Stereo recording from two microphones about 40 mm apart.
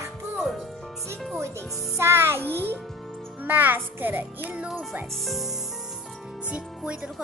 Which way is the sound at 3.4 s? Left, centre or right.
Right.